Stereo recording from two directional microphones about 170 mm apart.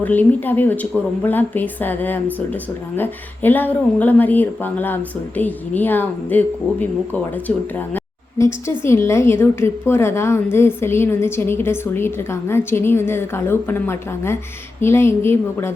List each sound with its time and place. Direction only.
0.0 s a woman's voice: 10° left (ahead or behind)
7.9 s a sound: 15° left (ahead or behind)
8.8 s a woman's voice: 15° left (ahead or behind)